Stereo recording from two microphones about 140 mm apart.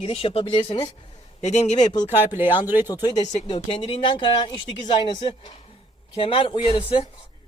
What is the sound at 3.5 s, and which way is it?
A man's voice, 40° left (ahead or behind).